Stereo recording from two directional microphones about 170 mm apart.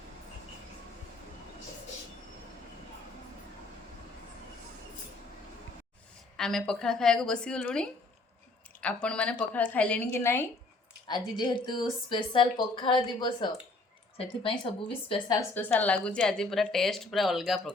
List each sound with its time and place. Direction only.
6.3 s a woman's voice: 5° left (ahead or behind)
11.1 s a woman's voice: 25° left (ahead or behind)
15.4 s a woman's voice: 10° left (ahead or behind)